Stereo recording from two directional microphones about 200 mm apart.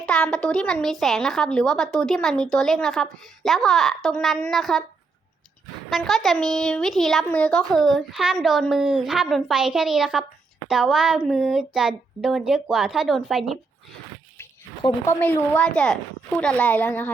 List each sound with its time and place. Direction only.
0.0 s a woman's voice: 5° left (ahead or behind)
5.9 s a woman's voice: centre (ahead or behind)
14.3 s a sound: 20° left (ahead or behind)
15.2 s a woman's voice: 5° left (ahead or behind)